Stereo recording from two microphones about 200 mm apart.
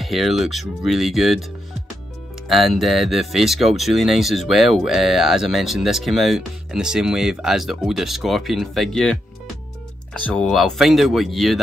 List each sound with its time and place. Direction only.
0.0 s speech: centre (ahead or behind)
2.4 s speech: centre (ahead or behind)